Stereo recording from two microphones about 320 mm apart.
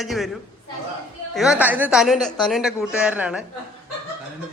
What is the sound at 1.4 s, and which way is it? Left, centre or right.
A woman's voice, centre.